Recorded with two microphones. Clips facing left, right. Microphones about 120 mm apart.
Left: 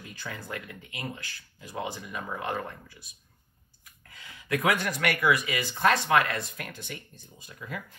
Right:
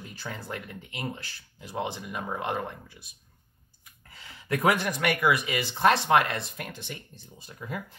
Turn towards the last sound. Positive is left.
turn(degrees=-25)  # may be behind; listen again after turning